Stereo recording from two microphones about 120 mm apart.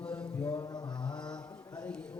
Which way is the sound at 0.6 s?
35° left (ahead or behind).